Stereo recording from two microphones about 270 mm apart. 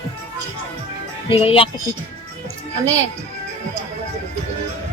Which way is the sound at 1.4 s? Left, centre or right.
Left.